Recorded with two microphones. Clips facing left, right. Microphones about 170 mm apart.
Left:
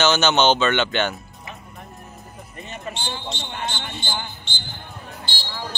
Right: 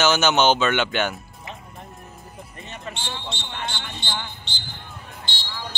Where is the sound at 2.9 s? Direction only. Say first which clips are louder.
Left 2 dB; 35° left (ahead or behind).